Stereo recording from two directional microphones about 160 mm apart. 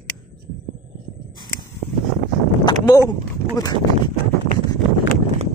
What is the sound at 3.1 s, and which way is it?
Speech, 25° left (ahead or behind).